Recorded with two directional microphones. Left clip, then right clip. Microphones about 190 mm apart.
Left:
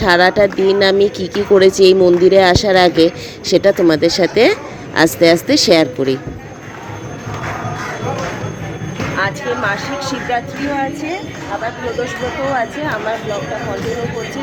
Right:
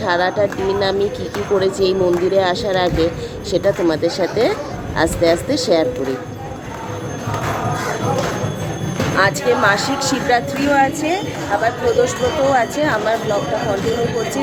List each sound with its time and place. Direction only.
0.0 s speech: 45° left (ahead or behind)
9.1 s a woman's voice: 15° right (ahead or behind)
12.5 s a woman's voice: 10° right (ahead or behind)